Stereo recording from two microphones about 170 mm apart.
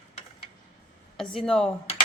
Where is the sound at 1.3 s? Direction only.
5° left (ahead or behind).